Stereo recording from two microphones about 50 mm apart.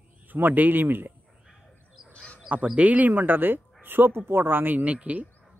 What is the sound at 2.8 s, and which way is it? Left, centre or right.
Speech, right.